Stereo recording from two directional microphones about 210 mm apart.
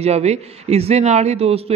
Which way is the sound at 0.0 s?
30° right (ahead or behind).